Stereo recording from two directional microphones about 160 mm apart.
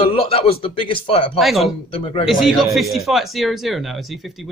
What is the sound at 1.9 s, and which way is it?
Speech, 35° left (ahead or behind).